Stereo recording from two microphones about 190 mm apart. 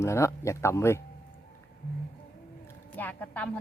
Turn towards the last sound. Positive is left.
turn(degrees=10)  # may be behind; listen again after turning